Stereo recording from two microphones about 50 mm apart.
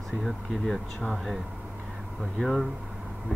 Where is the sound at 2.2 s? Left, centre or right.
Centre.